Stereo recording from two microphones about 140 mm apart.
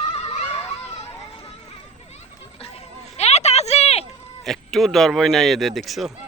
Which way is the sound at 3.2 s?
50° left (ahead or behind).